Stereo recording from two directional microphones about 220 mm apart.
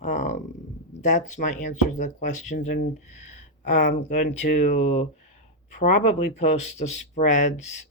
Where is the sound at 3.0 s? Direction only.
30° left (ahead or behind).